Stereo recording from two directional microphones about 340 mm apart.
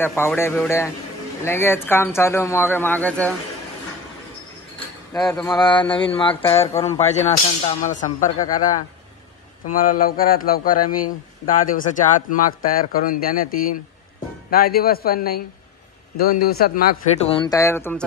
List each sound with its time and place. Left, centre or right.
0.0 s speech: centre
4.7 s a man's voice: centre
9.7 s a man's voice: left; by 18.0 s centre